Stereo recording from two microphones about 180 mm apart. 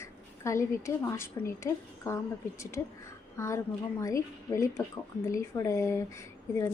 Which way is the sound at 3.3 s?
15° left (ahead or behind).